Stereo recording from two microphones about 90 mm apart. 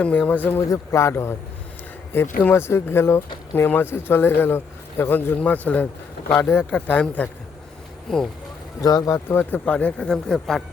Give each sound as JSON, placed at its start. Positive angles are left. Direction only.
{"t": 0.0, "sound": "speech", "side_deg": 15}
{"t": 0.7, "sound": "speech", "side_deg": 35}
{"t": 8.8, "sound": "speech", "side_deg": 45}
{"t": 9.4, "sound": "speech", "side_deg": 15}